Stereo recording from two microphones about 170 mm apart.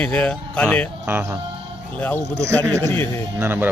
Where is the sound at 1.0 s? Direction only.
15° right (ahead or behind).